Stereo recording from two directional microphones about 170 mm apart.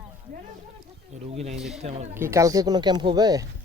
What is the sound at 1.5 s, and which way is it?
Speech, centre (ahead or behind).